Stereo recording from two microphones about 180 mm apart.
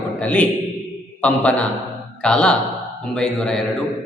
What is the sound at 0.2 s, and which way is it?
A man's voice, 10° left (ahead or behind).